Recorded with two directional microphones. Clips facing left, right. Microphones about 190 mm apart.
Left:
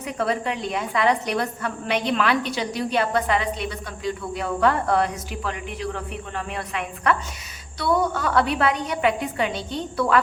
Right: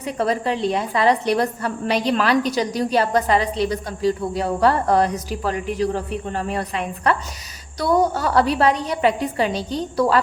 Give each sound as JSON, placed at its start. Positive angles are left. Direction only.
{"t": 0.0, "sound": "a woman's voice", "side_deg": -35}